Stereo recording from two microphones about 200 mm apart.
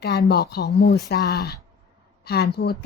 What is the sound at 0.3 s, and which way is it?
A woman's voice, 50° left (ahead or behind).